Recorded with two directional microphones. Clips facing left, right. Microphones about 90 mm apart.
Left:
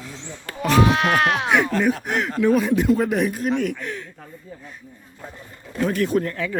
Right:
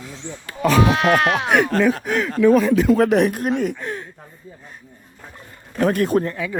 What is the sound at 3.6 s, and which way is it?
Speech, 35° right (ahead or behind).